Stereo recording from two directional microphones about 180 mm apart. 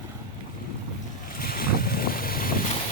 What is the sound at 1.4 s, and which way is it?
Boat, 55° left (ahead or behind).